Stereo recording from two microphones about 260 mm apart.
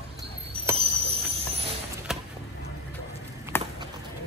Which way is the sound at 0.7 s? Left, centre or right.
Right.